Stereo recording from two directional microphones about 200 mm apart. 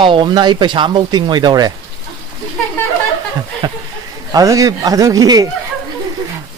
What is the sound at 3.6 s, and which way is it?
Speech, 20° right (ahead or behind).